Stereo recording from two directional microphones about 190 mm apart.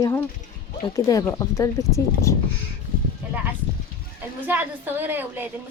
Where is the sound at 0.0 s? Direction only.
15° left (ahead or behind).